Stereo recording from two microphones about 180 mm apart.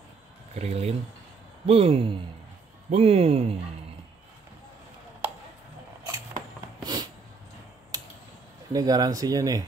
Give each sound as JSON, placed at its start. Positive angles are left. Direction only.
{"t": 0.6, "sound": "speech", "side_deg": -35}
{"t": 6.8, "sound": "a sound", "side_deg": -20}
{"t": 8.7, "sound": "speech", "side_deg": -20}